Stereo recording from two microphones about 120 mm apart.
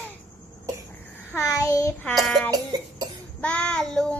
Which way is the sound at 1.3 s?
25° left (ahead or behind).